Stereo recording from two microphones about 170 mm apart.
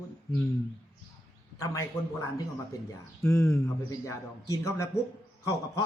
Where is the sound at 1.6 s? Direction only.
20° left (ahead or behind).